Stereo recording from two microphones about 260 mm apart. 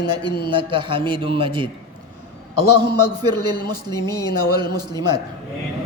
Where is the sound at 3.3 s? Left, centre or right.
Centre.